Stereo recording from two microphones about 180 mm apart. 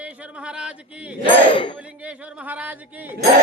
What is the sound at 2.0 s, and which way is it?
Speech, 5° right (ahead or behind).